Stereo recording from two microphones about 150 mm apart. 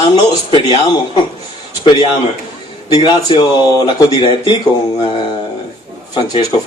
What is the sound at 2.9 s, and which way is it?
A man's voice, 30° left (ahead or behind).